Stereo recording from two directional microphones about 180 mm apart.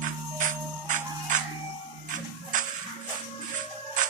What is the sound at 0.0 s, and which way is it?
Music, 45° right (ahead or behind).